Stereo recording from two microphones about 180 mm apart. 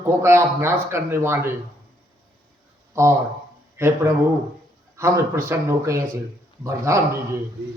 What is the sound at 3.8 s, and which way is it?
A man's voice, 15° right (ahead or behind).